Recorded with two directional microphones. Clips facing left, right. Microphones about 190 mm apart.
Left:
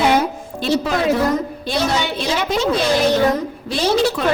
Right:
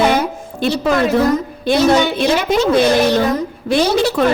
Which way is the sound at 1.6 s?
55° right (ahead or behind).